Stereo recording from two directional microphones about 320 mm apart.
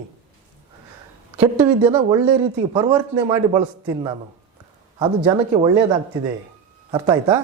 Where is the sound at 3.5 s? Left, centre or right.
Centre.